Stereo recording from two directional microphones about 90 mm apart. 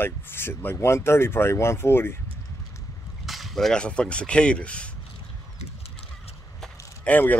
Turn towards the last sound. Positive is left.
turn(degrees=15)  # may be behind; listen again after turning